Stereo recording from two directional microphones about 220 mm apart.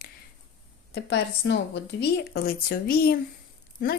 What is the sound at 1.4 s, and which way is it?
Speech, 55° left (ahead or behind).